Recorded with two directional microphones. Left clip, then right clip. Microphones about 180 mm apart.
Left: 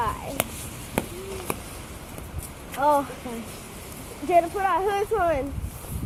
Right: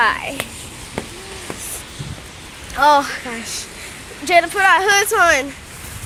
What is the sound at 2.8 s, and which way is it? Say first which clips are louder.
Speech: right 9 dB; 40° right (ahead or behind).